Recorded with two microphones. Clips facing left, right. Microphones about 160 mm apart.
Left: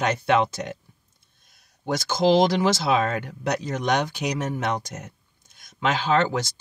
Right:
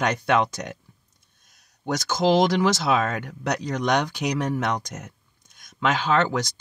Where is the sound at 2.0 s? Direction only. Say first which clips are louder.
Left 1 dB; 30° left (ahead or behind).